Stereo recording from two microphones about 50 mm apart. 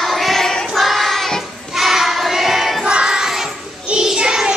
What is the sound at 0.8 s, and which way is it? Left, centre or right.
Child singing, centre.